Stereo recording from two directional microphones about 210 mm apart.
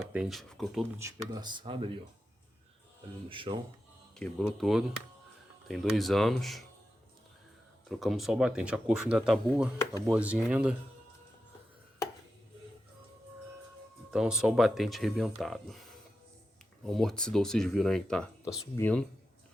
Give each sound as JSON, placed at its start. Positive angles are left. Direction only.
{"t": 0.0, "sound": "speech", "side_deg": 0}
{"t": 0.9, "sound": "speech", "side_deg": -15}
{"t": 3.2, "sound": "speech", "side_deg": -25}
{"t": 4.1, "sound": "speech", "side_deg": 5}
{"t": 7.9, "sound": "speech", "side_deg": 0}
{"t": 14.1, "sound": "speech", "side_deg": -5}
{"t": 16.8, "sound": "speech", "side_deg": 0}